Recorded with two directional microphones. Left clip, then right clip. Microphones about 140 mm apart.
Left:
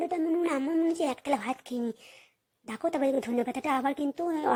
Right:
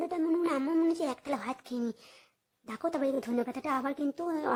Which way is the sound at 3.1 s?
5° left (ahead or behind).